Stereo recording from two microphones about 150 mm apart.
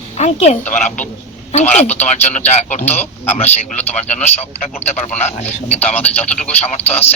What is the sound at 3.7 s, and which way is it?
A man's voice, 45° left (ahead or behind).